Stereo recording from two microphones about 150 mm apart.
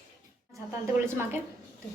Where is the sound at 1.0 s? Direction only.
15° right (ahead or behind).